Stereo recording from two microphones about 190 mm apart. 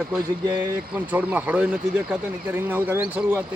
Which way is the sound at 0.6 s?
10° right (ahead or behind).